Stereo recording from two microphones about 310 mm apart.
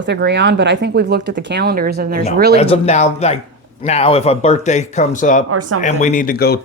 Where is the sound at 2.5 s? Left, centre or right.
Centre.